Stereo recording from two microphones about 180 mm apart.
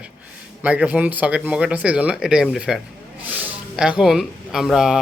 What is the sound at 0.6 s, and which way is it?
Speech, 5° right (ahead or behind).